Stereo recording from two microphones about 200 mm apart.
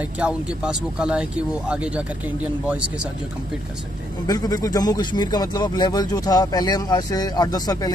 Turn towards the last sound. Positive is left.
turn(degrees=20)  # may be behind; listen again after turning